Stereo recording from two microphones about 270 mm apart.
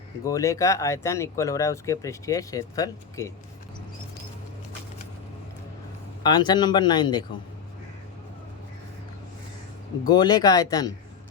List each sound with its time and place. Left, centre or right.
0.3 s speech: centre
6.2 s speech: centre
10.0 s speech: centre